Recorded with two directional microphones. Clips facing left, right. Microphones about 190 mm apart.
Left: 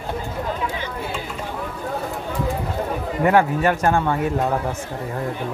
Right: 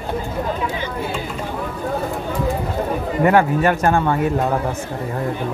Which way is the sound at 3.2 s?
60° right (ahead or behind).